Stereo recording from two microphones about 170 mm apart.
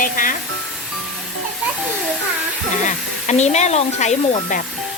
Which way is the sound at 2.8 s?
45° left (ahead or behind).